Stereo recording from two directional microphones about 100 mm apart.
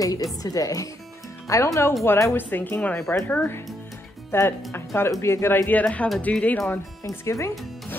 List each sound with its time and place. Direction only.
0.0 s speech: 35° left (ahead or behind); by 6.6 s 15° left (ahead or behind)
7.0 s speech: 30° left (ahead or behind)